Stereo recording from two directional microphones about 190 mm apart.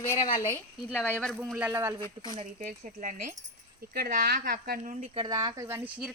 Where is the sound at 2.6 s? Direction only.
40° right (ahead or behind).